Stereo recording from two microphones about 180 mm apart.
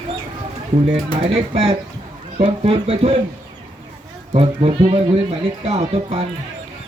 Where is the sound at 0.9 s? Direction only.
35° right (ahead or behind).